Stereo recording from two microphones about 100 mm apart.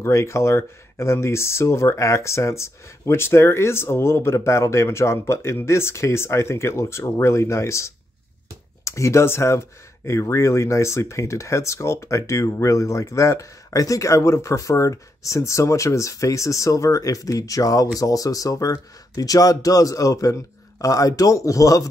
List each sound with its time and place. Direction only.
0.0 s speech: 30° left (ahead or behind)